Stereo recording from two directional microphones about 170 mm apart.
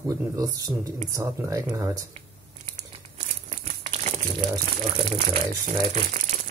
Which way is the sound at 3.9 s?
40° right (ahead or behind).